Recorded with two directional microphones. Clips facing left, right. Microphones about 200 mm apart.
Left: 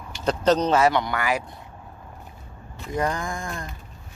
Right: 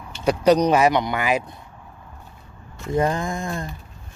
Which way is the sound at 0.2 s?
10° right (ahead or behind).